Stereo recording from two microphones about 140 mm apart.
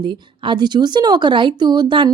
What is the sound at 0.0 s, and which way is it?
Speech, 35° right (ahead or behind).